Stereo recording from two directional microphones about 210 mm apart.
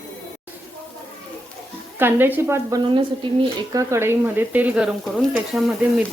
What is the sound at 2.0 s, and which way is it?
Speech, 10° right (ahead or behind).